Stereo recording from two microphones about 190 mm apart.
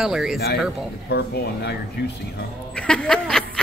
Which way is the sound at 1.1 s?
55° left (ahead or behind).